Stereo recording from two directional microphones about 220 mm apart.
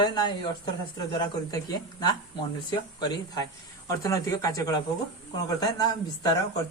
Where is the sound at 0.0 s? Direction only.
20° left (ahead or behind).